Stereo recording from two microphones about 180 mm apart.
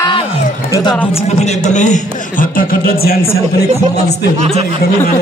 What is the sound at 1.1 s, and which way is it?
A man's voice, 40° left (ahead or behind).